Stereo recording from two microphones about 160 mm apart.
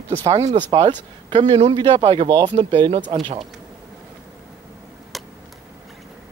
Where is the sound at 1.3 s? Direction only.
30° right (ahead or behind).